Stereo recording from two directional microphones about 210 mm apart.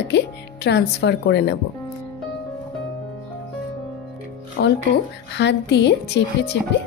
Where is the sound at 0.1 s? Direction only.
55° left (ahead or behind).